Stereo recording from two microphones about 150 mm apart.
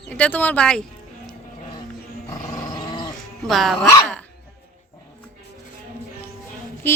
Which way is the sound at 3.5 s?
Centre (ahead or behind).